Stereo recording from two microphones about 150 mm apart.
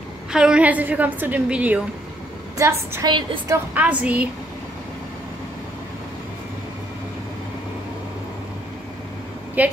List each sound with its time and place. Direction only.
0.3 s a woman's voice: 5° right (ahead or behind)
2.5 s a woman's voice: 20° right (ahead or behind)
3.1 s a woman's voice: 35° right (ahead or behind)
3.4 s a woman's voice: 15° right (ahead or behind)
9.6 s a woman's voice: 10° right (ahead or behind)